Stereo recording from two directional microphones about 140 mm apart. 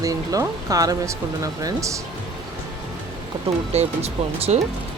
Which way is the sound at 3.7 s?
50° right (ahead or behind).